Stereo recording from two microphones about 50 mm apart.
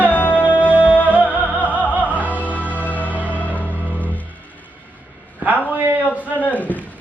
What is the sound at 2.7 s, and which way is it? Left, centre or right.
Music, left.